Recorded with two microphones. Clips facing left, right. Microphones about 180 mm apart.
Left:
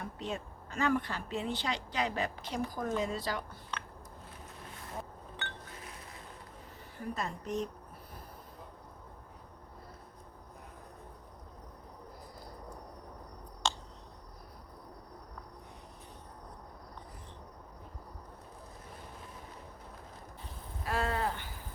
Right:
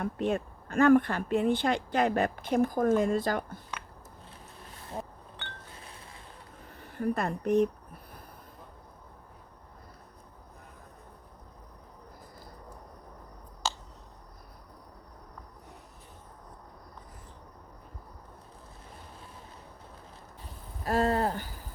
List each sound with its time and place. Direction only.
0.0 s speech: 55° right (ahead or behind)
6.9 s a woman's voice: 60° right (ahead or behind)
13.6 s finger snapping: 5° right (ahead or behind)
20.8 s a sound: 40° right (ahead or behind)